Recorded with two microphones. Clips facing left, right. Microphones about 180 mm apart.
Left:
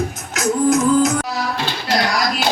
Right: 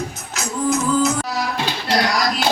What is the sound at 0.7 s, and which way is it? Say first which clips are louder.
Music: left 3 dB; 45° left (ahead or behind).